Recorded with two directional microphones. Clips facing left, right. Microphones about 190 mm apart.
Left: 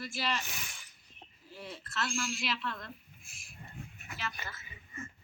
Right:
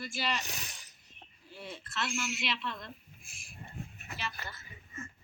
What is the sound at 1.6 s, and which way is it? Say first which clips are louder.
Speech: even; centre (ahead or behind).